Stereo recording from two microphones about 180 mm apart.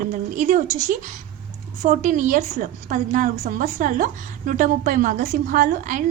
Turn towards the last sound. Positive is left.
turn(degrees=-45)  # may be behind; listen again after turning